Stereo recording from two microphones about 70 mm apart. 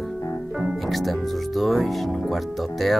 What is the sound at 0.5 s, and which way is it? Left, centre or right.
Music, centre.